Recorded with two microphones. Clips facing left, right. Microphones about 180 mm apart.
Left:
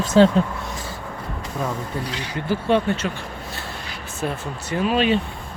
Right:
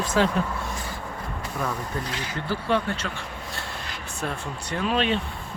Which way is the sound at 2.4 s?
20° left (ahead or behind).